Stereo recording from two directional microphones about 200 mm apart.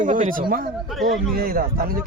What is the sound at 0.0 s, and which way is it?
A man's voice, 40° right (ahead or behind).